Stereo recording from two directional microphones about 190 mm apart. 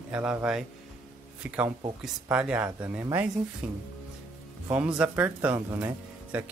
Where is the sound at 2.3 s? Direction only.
5° right (ahead or behind).